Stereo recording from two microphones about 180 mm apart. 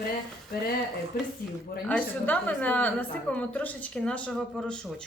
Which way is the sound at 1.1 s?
55° left (ahead or behind).